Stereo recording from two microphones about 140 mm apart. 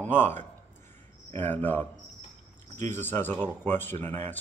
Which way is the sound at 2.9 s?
15° left (ahead or behind).